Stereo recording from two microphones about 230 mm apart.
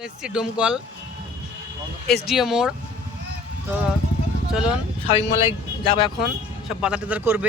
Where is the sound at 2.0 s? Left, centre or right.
Left.